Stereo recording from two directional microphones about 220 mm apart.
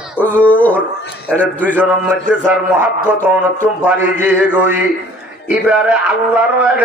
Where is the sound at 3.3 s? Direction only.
5° right (ahead or behind).